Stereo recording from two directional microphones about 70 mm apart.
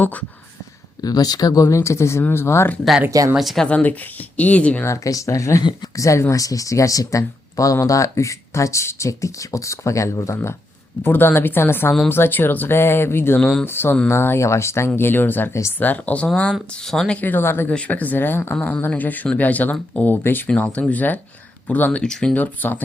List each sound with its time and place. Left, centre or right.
0.0 s speech: left
1.0 s speech: left
1.6 s speech: left
3.3 s speech: centre
3.6 s speech: centre
5.0 s speech: left
11.0 s speech: left; by 17.2 s centre
17.2 s speech: left
17.7 s speech: centre
20.5 s speech: centre
22.0 s speech: centre
22.4 s speech: left